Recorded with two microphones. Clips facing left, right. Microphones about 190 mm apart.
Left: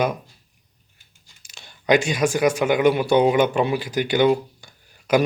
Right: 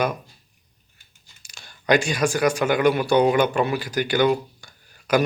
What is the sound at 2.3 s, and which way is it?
A man's voice, 20° left (ahead or behind).